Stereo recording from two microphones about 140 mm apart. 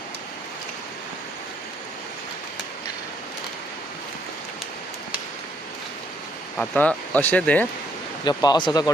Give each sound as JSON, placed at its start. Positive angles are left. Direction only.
{"t": 6.6, "sound": "speech", "side_deg": 10}
{"t": 8.2, "sound": "speech", "side_deg": 30}